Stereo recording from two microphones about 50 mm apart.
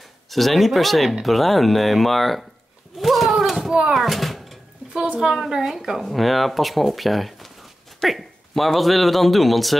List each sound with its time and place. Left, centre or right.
0.3 s speech: centre
3.0 s a sound: centre
4.9 s a woman's voice: right
5.2 s speech: centre